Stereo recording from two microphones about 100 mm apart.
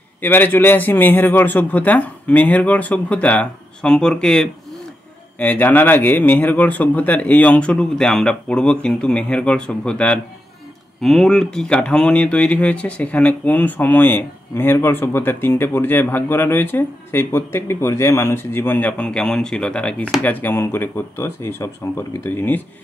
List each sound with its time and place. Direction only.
0.2 s speech: 20° left (ahead or behind)